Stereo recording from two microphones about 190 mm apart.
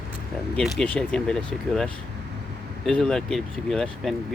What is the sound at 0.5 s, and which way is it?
Speech, 5° left (ahead or behind).